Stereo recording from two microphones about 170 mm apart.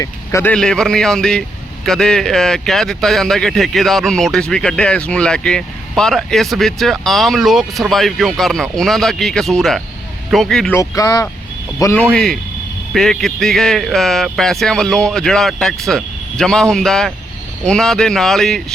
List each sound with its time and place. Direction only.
0.0 s speech: 15° left (ahead or behind)
0.5 s a man's voice: 5° left (ahead or behind)
10.8 s a man's voice: 20° left (ahead or behind); by 18.6 s centre (ahead or behind)